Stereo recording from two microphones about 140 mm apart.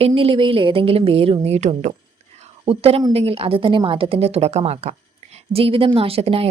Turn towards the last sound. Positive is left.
turn(degrees=-45)  # may be behind; listen again after turning